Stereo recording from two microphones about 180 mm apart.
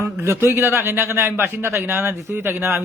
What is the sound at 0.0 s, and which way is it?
A man's voice, 15° right (ahead or behind).